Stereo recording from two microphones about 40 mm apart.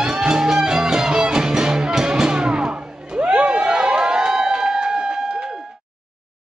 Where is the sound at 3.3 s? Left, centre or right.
Right.